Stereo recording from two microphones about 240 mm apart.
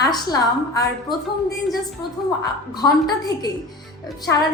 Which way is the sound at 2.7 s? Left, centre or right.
Centre.